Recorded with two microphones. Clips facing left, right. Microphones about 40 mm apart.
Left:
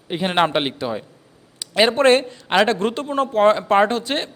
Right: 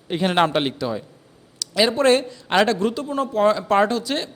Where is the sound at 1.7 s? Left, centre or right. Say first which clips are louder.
Left 2 dB; left.